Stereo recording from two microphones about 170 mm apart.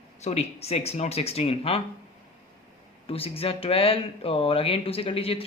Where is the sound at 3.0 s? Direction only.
35° left (ahead or behind).